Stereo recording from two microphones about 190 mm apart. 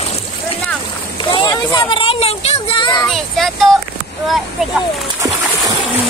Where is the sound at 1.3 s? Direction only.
25° left (ahead or behind).